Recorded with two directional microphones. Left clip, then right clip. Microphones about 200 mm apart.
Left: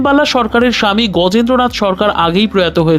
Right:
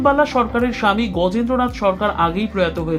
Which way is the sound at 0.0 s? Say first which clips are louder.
Left 4 dB; 40° left (ahead or behind).